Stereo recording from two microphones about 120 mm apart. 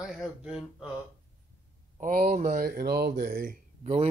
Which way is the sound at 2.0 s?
90° right.